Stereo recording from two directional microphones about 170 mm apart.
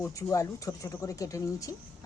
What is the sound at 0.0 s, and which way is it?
A woman's voice, 20° left (ahead or behind).